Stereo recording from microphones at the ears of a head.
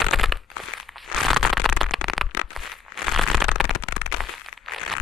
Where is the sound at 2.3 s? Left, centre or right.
Left.